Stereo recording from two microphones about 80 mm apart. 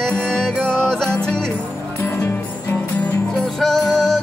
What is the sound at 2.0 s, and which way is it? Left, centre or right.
Music, left.